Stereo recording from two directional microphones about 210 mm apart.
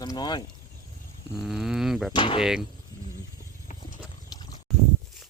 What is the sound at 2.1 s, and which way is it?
Speech, 20° left (ahead or behind).